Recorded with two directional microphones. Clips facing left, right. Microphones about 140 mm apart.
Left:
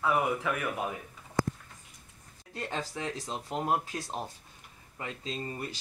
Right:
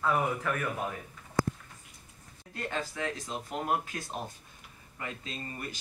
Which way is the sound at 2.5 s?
30° left (ahead or behind).